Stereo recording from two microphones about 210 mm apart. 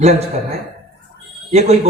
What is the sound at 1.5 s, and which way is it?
Speech, 30° right (ahead or behind).